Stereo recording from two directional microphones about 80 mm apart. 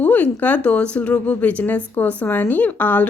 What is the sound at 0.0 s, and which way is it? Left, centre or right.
A woman's voice, centre.